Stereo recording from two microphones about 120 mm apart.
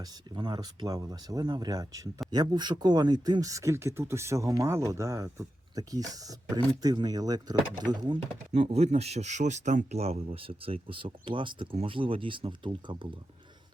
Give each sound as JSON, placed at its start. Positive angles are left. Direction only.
{"t": 0.0, "sound": "speech", "side_deg": -35}
{"t": 8.5, "sound": "speech", "side_deg": -60}